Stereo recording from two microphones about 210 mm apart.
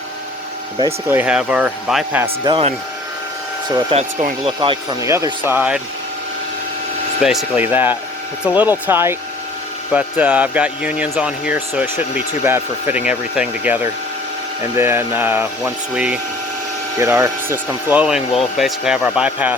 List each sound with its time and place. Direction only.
1.0 s speech: 10° right (ahead or behind)
2.2 s speech: 20° right (ahead or behind)
4.2 s speech: 35° right (ahead or behind)
4.6 s speech: 20° right (ahead or behind)
7.2 s speech: 5° right (ahead or behind)